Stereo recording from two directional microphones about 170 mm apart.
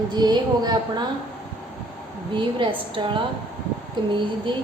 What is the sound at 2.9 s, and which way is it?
A woman's voice, 30° right (ahead or behind).